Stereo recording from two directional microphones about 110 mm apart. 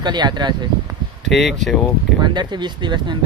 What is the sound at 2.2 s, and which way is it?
Speech, 45° right (ahead or behind).